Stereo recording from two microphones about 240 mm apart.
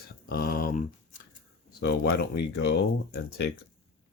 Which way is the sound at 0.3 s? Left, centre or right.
Left.